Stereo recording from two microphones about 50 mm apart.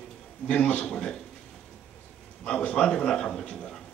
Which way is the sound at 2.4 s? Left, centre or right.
Centre.